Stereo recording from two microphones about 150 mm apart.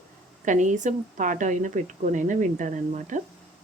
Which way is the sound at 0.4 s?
55° right (ahead or behind).